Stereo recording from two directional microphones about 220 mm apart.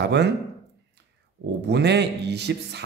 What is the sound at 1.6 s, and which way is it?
Speech, 50° right (ahead or behind).